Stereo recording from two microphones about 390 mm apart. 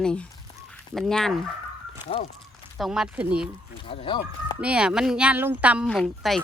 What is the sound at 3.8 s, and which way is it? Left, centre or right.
Speech, centre.